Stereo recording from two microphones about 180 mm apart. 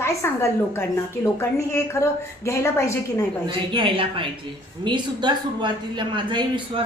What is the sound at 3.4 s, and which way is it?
Speech, 25° right (ahead or behind).